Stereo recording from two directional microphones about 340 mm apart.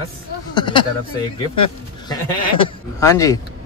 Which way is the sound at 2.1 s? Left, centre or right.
Centre.